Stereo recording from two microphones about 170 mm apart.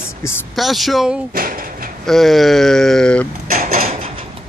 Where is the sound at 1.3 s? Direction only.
55° right (ahead or behind).